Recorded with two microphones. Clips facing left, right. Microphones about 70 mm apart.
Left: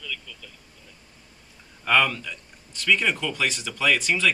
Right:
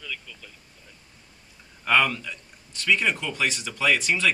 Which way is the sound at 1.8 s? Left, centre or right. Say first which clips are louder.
Even; centre.